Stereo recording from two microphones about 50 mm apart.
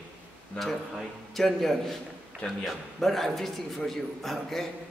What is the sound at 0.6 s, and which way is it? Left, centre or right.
A man's voice, centre.